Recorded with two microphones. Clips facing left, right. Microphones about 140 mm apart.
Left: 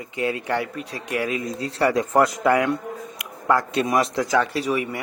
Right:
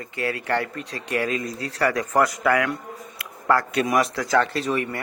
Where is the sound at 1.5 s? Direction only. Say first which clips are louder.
Left 3 dB; 25° left (ahead or behind).